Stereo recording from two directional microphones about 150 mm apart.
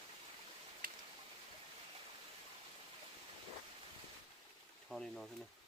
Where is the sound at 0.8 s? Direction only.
70° right (ahead or behind).